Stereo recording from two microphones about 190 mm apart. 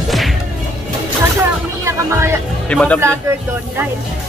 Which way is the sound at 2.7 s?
5° left (ahead or behind).